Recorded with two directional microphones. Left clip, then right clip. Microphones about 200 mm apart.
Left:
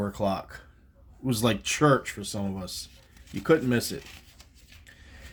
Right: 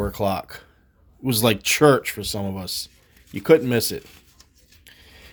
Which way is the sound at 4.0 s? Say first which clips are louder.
Right 1 dB; centre (ahead or behind).